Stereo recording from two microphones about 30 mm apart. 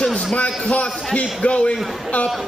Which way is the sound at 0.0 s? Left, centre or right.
Left.